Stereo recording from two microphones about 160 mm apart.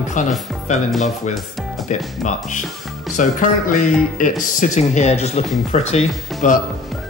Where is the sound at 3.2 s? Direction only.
55° left (ahead or behind).